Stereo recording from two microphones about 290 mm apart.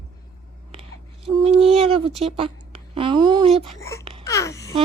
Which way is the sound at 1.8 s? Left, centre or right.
Centre.